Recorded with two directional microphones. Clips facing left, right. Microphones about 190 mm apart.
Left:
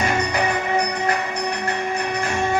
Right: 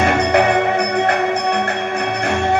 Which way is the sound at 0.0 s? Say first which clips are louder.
Right 7 dB; 65° right (ahead or behind).